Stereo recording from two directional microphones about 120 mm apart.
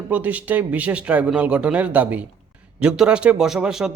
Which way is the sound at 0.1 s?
15° right (ahead or behind).